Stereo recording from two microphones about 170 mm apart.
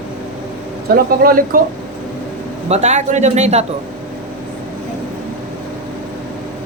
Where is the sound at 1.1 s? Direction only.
60° right (ahead or behind).